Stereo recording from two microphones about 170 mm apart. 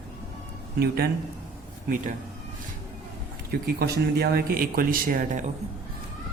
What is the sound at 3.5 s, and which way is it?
Speech, 65° right (ahead or behind).